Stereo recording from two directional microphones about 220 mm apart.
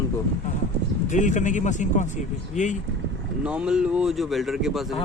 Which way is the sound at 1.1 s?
35° left (ahead or behind).